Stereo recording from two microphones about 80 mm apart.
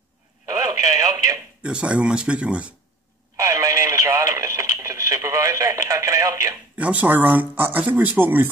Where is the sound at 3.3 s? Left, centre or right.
Right.